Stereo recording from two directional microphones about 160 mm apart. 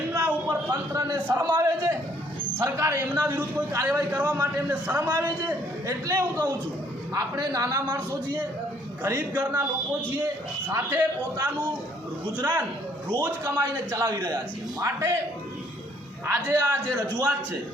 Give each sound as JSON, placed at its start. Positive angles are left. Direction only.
{"t": 0.1, "sound": "a sound", "side_deg": -15}
{"t": 1.5, "sound": "a man's voice", "side_deg": -20}
{"t": 10.7, "sound": "a man's voice", "side_deg": -15}
{"t": 16.2, "sound": "a man's voice", "side_deg": -15}